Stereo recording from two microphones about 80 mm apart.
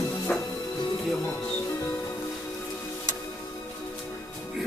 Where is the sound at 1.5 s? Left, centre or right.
Left.